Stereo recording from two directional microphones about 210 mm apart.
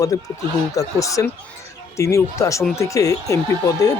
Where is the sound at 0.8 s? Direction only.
15° left (ahead or behind).